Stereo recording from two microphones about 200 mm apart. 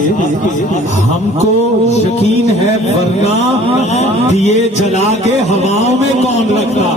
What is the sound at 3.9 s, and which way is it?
Speech, 35° left (ahead or behind).